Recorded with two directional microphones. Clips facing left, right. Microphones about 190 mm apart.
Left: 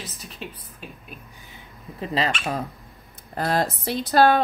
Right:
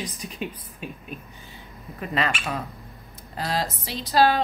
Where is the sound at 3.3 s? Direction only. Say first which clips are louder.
Left 4 dB; 55° left (ahead or behind).